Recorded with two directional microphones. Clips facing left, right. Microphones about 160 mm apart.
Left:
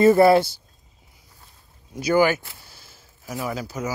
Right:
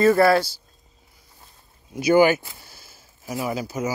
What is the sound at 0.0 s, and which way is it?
Speech, 20° left (ahead or behind).